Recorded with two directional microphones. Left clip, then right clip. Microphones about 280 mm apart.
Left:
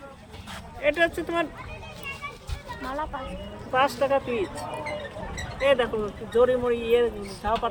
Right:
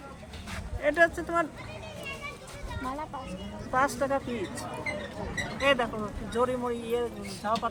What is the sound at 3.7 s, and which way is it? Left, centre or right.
Speech, centre.